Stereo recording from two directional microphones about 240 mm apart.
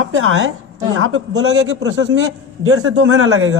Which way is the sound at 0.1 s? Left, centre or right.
Right.